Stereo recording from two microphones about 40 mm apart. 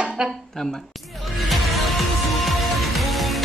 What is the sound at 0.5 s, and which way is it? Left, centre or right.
Speech, centre.